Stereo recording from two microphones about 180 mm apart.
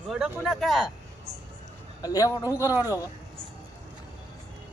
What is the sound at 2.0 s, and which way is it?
Speech, 20° left (ahead or behind).